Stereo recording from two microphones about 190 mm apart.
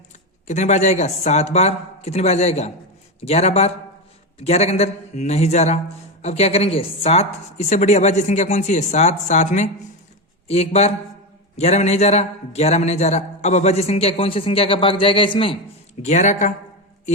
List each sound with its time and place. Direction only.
0.4 s a man's voice: 40° left (ahead or behind)
16.0 s a man's voice: 40° left (ahead or behind)